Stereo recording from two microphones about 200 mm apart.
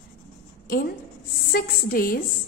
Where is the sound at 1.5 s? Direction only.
45° left (ahead or behind).